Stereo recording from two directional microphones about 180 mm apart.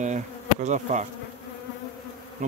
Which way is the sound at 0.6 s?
40° right (ahead or behind).